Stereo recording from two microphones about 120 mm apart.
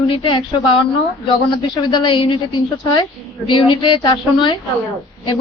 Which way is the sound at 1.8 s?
40° left (ahead or behind).